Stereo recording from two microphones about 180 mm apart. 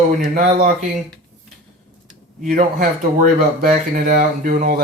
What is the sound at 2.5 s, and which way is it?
Speech, 45° right (ahead or behind).